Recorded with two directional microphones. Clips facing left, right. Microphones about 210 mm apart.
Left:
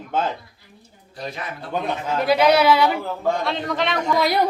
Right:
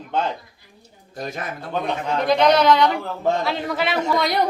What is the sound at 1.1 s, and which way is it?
Speech, 45° right (ahead or behind).